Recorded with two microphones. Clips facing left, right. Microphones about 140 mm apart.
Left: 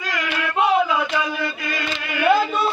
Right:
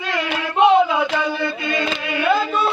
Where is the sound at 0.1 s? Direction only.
25° right (ahead or behind).